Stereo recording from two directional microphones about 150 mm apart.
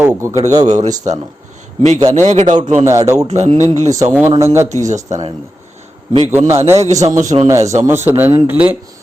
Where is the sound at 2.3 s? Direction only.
55° right (ahead or behind).